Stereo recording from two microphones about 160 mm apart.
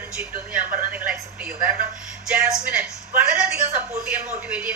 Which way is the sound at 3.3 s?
5° right (ahead or behind).